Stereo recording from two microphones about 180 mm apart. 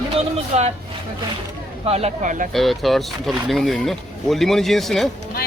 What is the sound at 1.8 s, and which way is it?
Speech, 35° right (ahead or behind).